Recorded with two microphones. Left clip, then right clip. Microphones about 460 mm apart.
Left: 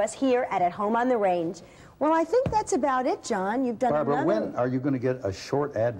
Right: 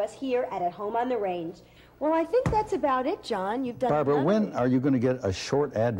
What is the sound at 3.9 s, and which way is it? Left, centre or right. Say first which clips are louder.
A man's voice: right 2 dB; right.